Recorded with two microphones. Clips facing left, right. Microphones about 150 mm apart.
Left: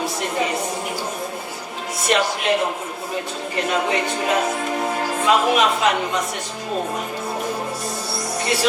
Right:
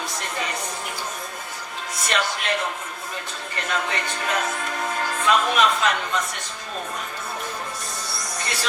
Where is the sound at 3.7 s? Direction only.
20° left (ahead or behind).